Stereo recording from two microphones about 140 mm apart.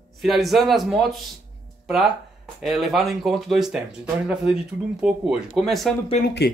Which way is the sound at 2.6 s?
Centre (ahead or behind).